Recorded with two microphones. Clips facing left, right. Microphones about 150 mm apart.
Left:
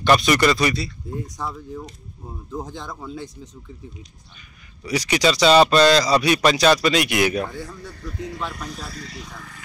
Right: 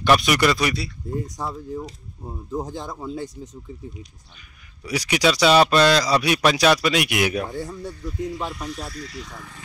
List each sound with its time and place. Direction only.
0.0 s speech: 5° right (ahead or behind)
4.8 s speech: 5° right (ahead or behind)
7.5 s speech: 40° right (ahead or behind)
8.1 s speech: 75° left (ahead or behind)
9.0 s speech: 20° left (ahead or behind)